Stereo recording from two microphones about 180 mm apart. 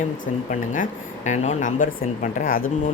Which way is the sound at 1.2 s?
40° left (ahead or behind).